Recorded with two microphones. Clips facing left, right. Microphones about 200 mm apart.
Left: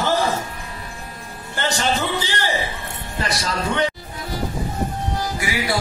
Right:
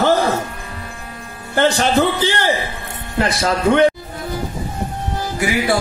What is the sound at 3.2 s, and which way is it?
Speech, 50° right (ahead or behind).